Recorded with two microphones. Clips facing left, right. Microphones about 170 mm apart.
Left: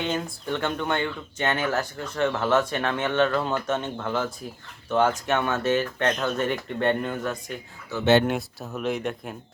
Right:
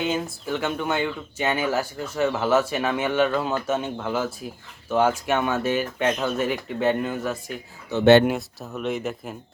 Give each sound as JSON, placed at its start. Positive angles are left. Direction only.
{"t": 0.0, "sound": "speech", "side_deg": -5}
{"t": 7.9, "sound": "speech", "side_deg": -15}
{"t": 8.3, "sound": "speech", "side_deg": 0}